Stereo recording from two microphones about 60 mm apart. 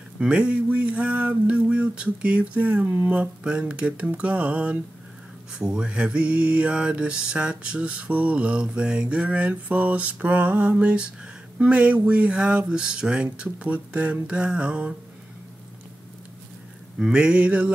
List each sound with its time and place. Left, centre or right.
0.2 s mantra: centre
17.0 s mantra: centre